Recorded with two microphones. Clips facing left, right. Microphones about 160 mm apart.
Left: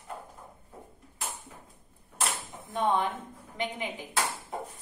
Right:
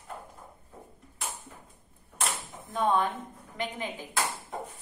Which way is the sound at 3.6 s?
15° left (ahead or behind).